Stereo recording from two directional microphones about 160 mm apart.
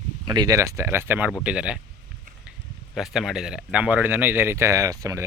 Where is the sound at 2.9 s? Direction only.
Centre (ahead or behind).